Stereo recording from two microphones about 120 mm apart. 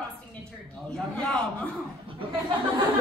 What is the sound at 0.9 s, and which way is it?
Speech, 5° left (ahead or behind).